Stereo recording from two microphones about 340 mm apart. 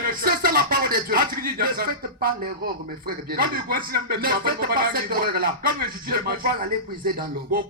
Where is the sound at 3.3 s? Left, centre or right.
Right.